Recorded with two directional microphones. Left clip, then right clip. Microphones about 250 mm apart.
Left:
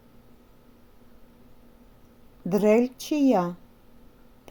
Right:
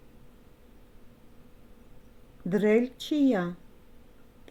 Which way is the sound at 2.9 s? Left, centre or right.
Left.